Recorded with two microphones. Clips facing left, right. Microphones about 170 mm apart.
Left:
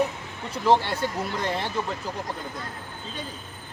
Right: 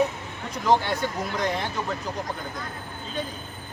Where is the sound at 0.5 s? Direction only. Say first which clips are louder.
Left 1 dB; 30° left (ahead or behind).